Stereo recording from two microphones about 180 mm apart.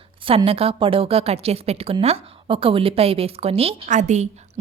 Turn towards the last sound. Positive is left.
turn(degrees=-40)  # may be behind; listen again after turning